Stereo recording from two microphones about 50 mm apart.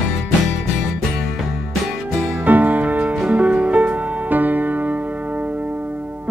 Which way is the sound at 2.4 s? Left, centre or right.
Right.